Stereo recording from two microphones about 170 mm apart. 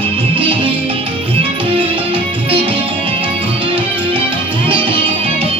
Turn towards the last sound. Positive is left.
turn(degrees=-30)  # may be behind; listen again after turning